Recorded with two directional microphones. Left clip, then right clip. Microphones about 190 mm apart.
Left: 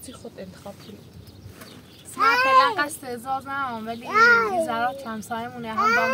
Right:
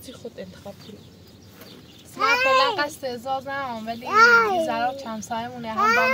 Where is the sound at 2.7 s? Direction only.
25° left (ahead or behind).